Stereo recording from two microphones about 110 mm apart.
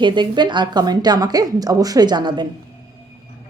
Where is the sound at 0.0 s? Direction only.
45° right (ahead or behind).